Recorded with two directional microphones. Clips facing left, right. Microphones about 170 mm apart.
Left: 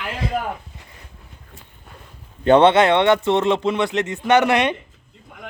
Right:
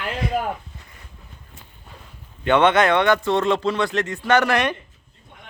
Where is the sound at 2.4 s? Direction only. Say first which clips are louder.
Left 4 dB; 35° left (ahead or behind).